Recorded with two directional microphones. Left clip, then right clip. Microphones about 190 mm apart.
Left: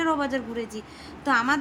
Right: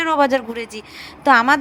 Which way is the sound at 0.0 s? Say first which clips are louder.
Right 9 dB; 35° right (ahead or behind).